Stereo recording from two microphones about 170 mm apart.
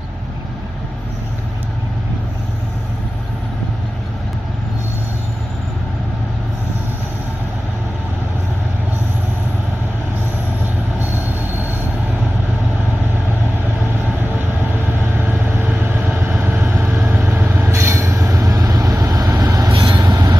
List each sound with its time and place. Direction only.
15.8 s vehicle: 10° right (ahead or behind)
17.0 s train: 15° right (ahead or behind)